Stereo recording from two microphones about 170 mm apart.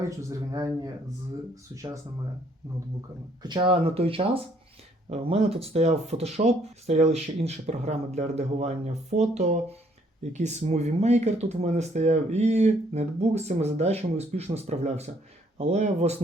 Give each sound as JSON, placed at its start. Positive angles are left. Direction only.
{"t": 0.2, "sound": "a man's voice", "side_deg": -20}
{"t": 1.7, "sound": "a man's voice", "side_deg": -20}
{"t": 3.4, "sound": "speech", "side_deg": -25}